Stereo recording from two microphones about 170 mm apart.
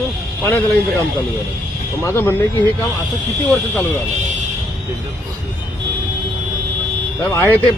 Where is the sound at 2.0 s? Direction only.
10° left (ahead or behind).